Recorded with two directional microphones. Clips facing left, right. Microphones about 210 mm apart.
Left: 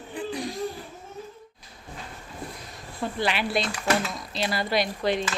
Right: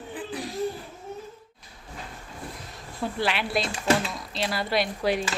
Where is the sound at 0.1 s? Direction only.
5° right (ahead or behind).